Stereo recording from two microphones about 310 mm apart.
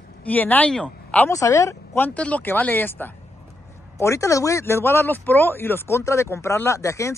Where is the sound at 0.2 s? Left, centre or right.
Centre.